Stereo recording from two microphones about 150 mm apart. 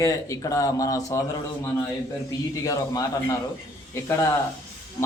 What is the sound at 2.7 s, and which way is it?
Speech, 25° left (ahead or behind).